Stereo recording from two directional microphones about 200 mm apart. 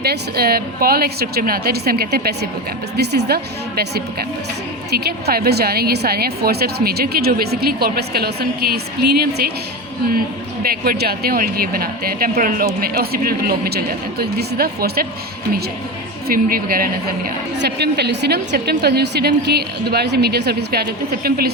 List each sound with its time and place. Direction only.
0.0 s a woman's voice: 50° right (ahead or behind)
10.6 s a woman's voice: 50° right (ahead or behind)
16.2 s a woman's voice: 45° right (ahead or behind)